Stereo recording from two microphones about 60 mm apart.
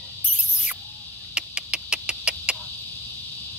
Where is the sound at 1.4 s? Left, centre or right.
Right.